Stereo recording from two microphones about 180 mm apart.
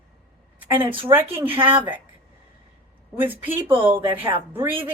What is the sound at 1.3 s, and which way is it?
Speech, 10° right (ahead or behind).